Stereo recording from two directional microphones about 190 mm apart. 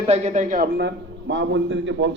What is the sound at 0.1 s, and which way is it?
A man's voice, 40° right (ahead or behind).